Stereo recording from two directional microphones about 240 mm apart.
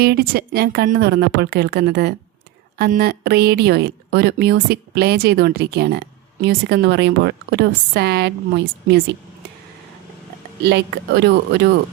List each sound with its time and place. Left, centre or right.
0.0 s a woman's voice: right
10.6 s a woman's voice: right